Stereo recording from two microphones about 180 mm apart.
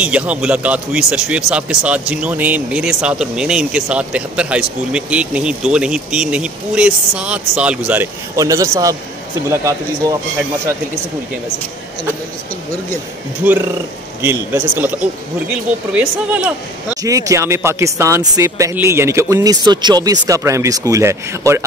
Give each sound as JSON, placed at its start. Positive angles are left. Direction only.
{"t": 0.0, "sound": "speech", "side_deg": -5}
{"t": 13.4, "sound": "a woman's voice", "side_deg": -10}
{"t": 17.0, "sound": "speech", "side_deg": -20}